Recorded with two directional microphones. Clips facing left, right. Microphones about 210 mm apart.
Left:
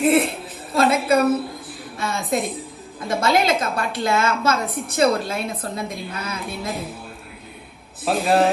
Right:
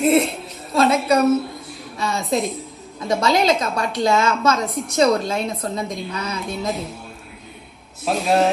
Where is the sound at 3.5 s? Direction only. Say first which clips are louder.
Right 1 dB; 55° left (ahead or behind).